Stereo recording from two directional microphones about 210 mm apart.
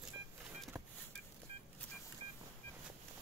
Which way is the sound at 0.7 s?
15° right (ahead or behind).